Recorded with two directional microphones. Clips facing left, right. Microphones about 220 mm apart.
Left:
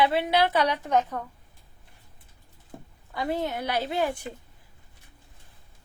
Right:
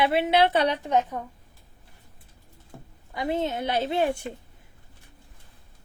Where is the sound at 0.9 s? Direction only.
15° right (ahead or behind).